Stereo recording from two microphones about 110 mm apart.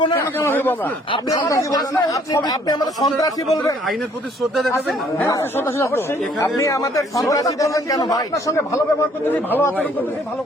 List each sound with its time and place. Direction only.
0.1 s a man's voice: 25° left (ahead or behind)
1.3 s a man's voice: 30° left (ahead or behind)
5.3 s a man's voice: 20° left (ahead or behind)
6.4 s a man's voice: 30° left (ahead or behind)
9.3 s a man's voice: 20° left (ahead or behind)